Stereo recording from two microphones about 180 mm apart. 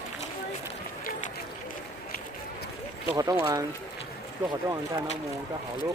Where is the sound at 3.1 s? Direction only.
20° right (ahead or behind).